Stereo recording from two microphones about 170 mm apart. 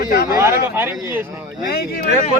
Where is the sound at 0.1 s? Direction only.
65° left (ahead or behind).